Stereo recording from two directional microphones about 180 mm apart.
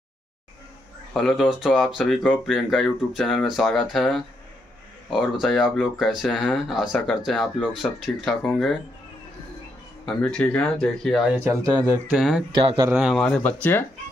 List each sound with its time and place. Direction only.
1.1 s speech: centre (ahead or behind)
10.0 s speech: 5° left (ahead or behind)
11.6 s speech: 15° right (ahead or behind)
12.2 s speech: centre (ahead or behind)
12.5 s a man's voice: 25° right (ahead or behind)
12.9 s speech: centre (ahead or behind)